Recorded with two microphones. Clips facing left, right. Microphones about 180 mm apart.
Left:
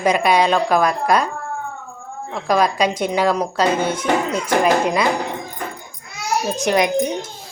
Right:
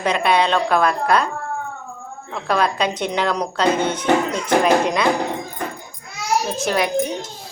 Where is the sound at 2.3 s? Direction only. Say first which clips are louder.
Left 2 dB; 10° left (ahead or behind).